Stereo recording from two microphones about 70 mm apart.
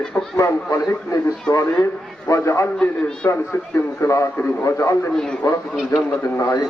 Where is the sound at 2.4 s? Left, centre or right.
Left.